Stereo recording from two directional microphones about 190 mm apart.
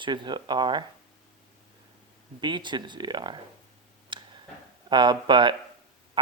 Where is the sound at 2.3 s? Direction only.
25° right (ahead or behind).